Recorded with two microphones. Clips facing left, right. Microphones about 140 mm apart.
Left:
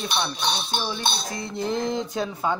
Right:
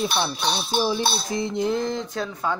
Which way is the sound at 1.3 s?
25° right (ahead or behind).